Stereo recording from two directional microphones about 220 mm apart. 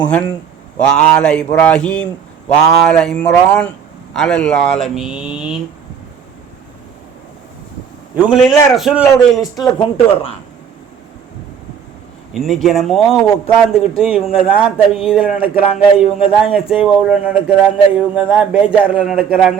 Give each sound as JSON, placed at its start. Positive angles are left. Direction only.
{"t": 0.0, "sound": "speech", "side_deg": 5}
{"t": 8.1, "sound": "speech", "side_deg": -5}
{"t": 9.7, "sound": "speech", "side_deg": 20}
{"t": 12.3, "sound": "speech", "side_deg": 0}